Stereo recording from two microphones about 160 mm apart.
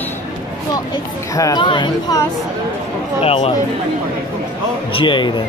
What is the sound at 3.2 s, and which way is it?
Speech, 35° left (ahead or behind).